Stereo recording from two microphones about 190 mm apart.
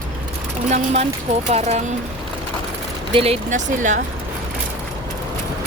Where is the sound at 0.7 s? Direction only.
35° right (ahead or behind).